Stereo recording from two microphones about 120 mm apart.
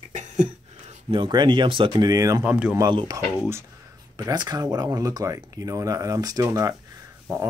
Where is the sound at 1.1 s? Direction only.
40° right (ahead or behind).